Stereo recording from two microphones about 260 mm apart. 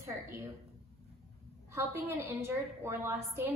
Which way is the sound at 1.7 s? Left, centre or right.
Centre.